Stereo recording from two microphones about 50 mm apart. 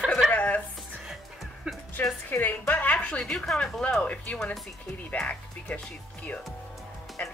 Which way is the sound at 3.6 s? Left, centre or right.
Centre.